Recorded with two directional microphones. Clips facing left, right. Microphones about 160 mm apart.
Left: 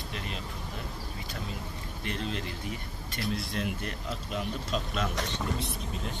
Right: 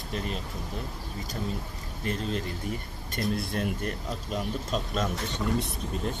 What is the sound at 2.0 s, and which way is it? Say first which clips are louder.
Speech: right 4 dB; 40° right (ahead or behind).